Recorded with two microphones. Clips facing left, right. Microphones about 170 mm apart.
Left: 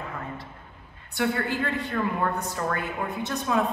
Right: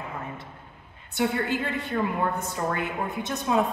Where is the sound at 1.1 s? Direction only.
20° right (ahead or behind).